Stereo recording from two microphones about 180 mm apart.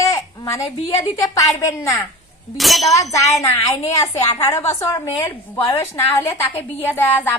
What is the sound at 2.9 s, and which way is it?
A woman's voice, 15° left (ahead or behind).